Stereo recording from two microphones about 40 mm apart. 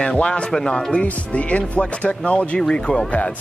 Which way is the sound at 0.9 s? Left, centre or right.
Left.